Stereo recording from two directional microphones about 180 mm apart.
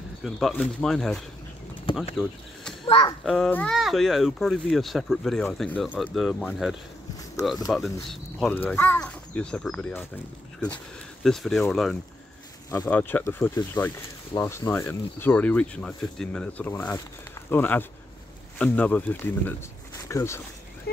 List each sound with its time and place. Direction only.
0.2 s speech: centre (ahead or behind)
2.1 s a sound: centre (ahead or behind)
3.3 s speech: 5° left (ahead or behind)